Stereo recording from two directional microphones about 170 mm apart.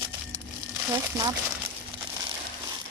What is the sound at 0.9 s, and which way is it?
Speech, 20° right (ahead or behind).